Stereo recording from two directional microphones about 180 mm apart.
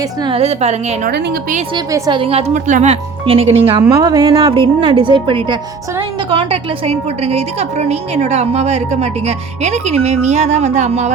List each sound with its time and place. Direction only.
0.2 s a woman's voice: 30° right (ahead or behind)
1.1 s a woman's voice: 55° right (ahead or behind)
1.7 s a woman's voice: 25° right (ahead or behind); by 11.1 s 40° right (ahead or behind)